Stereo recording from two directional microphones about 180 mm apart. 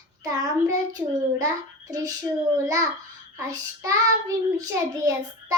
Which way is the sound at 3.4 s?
20° right (ahead or behind).